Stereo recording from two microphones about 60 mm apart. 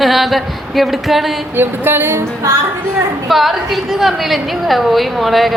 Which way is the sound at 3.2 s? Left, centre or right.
Centre.